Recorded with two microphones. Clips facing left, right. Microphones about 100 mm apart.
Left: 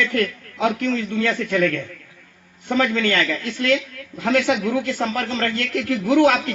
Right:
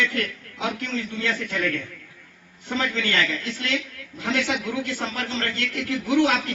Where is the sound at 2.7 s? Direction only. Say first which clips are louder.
Left 6 dB; 45° left (ahead or behind).